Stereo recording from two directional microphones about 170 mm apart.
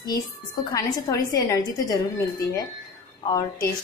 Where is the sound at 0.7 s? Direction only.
20° left (ahead or behind).